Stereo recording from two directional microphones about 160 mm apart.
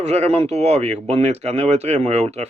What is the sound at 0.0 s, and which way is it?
A man's voice, 45° right (ahead or behind).